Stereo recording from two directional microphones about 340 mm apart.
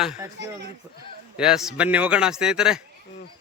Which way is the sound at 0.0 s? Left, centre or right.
Centre.